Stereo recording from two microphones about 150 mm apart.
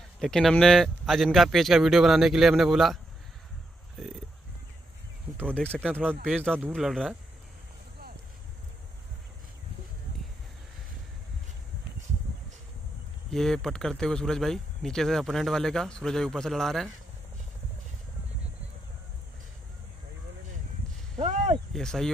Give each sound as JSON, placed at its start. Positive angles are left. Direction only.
{"t": 0.2, "sound": "speech", "side_deg": 5}
{"t": 5.5, "sound": "speech", "side_deg": 5}
{"t": 13.3, "sound": "speech", "side_deg": 0}
{"t": 21.2, "sound": "a sound", "side_deg": -50}
{"t": 21.7, "sound": "speech", "side_deg": 5}